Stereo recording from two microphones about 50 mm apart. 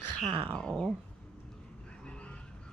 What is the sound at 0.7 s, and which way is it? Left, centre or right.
Speech, centre.